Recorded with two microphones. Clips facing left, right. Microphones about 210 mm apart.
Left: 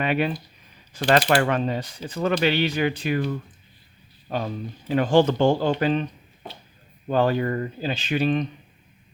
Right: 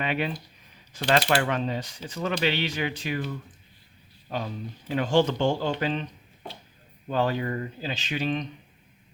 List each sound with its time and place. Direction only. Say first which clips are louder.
0.0 s speech: left 5 dB; 50° left (ahead or behind)
7.1 s speech: left 5 dB; 50° left (ahead or behind)